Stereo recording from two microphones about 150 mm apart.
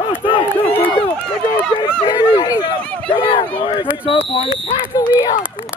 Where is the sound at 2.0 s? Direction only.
35° left (ahead or behind).